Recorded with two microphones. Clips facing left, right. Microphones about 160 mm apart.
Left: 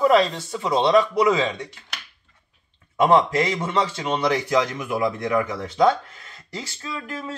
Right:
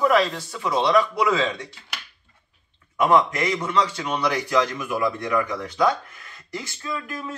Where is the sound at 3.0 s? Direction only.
30° left (ahead or behind).